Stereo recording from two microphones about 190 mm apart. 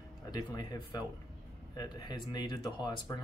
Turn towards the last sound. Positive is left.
turn(degrees=25)  # may be behind; listen again after turning